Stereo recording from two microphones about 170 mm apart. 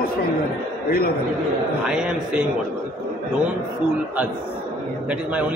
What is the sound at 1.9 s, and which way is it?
Speech, 5° right (ahead or behind).